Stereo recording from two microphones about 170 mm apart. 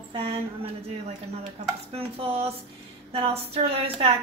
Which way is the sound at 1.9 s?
35° right (ahead or behind).